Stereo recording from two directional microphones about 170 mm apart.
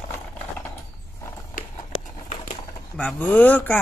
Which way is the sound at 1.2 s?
15° left (ahead or behind).